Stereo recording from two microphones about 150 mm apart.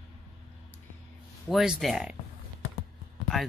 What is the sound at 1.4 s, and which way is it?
Speech, 5° right (ahead or behind).